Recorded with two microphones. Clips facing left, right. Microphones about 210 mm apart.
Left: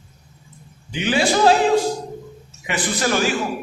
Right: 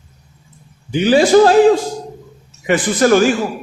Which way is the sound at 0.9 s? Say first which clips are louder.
Right 9 dB; 40° right (ahead or behind).